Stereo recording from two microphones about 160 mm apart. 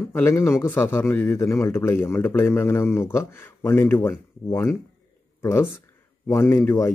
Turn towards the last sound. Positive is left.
turn(degrees=20)  # may be behind; listen again after turning